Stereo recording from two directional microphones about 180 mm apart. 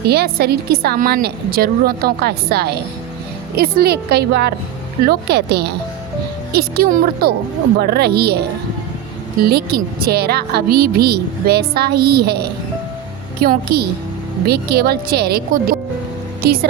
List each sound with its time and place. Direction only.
0.0 s a woman's voice: 60° right (ahead or behind)